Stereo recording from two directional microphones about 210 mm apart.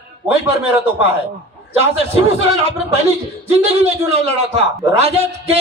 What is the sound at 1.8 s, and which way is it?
Speech, 30° right (ahead or behind).